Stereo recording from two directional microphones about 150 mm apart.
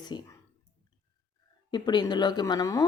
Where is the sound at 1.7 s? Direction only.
30° left (ahead or behind).